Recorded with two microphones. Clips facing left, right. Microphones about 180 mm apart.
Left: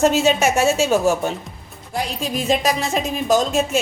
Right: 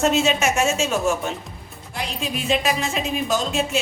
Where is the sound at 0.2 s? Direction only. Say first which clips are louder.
Left 3 dB; 35° left (ahead or behind).